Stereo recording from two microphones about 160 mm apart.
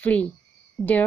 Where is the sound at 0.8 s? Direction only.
Centre (ahead or behind).